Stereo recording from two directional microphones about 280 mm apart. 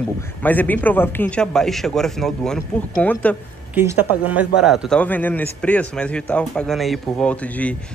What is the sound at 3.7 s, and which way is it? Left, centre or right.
Speech, centre.